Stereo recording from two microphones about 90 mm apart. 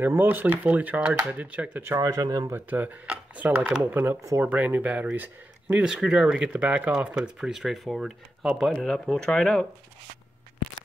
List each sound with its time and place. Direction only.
0.0 s speech: 20° right (ahead or behind)
2.0 s speech: 45° right (ahead or behind)
2.5 s speech: 20° right (ahead or behind)
5.9 s speech: 5° right (ahead or behind)
8.7 s speech: 5° left (ahead or behind)